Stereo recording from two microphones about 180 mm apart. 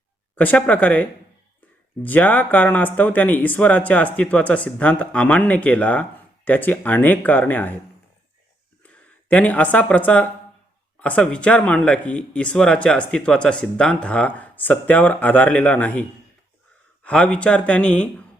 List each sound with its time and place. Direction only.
0.3 s speech: 10° left (ahead or behind)
8.8 s speech: 5° left (ahead or behind)